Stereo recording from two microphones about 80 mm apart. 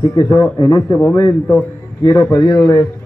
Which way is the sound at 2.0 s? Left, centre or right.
Left.